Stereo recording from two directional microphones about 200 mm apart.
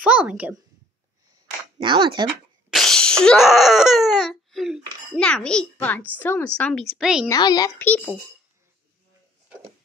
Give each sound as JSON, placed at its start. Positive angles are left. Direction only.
{"t": 0.0, "sound": "a woman's voice", "side_deg": -5}
{"t": 1.8, "sound": "speech", "side_deg": -25}
{"t": 2.2, "sound": "speech", "side_deg": 0}
{"t": 7.2, "sound": "a child's voice", "side_deg": 20}